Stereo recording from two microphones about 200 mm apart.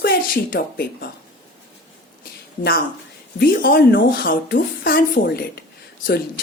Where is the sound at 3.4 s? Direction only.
45° left (ahead or behind).